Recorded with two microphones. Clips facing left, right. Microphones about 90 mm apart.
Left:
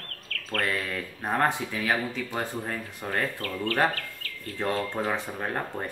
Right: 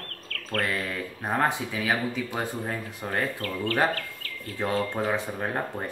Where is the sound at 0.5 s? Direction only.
35° right (ahead or behind).